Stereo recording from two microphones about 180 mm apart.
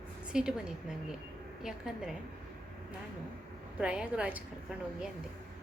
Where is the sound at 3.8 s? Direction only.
5° right (ahead or behind).